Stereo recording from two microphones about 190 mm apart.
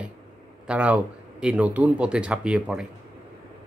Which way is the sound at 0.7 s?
5° right (ahead or behind).